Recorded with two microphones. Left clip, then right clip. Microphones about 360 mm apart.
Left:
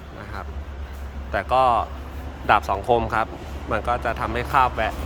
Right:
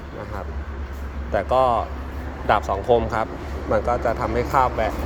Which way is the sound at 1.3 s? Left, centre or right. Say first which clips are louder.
Even; centre.